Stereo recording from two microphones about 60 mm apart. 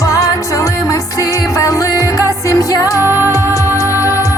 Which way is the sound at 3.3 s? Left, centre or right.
Left.